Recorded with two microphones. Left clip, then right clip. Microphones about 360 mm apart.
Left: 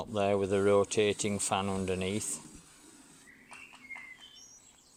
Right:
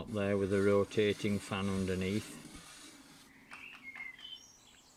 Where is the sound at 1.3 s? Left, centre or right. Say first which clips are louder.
Left 6 dB; centre.